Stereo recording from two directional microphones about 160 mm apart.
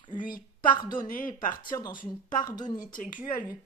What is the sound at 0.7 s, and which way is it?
Speech, 30° left (ahead or behind).